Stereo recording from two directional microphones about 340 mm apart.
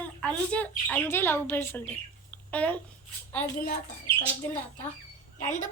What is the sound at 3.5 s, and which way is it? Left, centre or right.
Speech, left.